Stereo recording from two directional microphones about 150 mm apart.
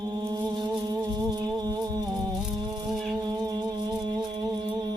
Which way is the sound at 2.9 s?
Centre (ahead or behind).